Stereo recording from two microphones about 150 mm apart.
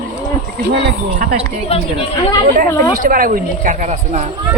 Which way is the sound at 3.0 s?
65° right (ahead or behind).